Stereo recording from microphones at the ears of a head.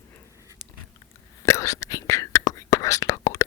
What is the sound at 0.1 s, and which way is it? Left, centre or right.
Whispering, left.